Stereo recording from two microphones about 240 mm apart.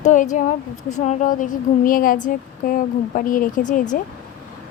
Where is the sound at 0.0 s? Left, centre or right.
Left.